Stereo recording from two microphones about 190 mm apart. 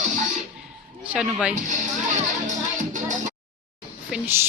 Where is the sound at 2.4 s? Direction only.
40° right (ahead or behind).